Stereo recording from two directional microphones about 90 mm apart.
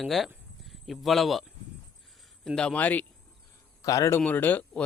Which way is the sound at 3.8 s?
35° left (ahead or behind).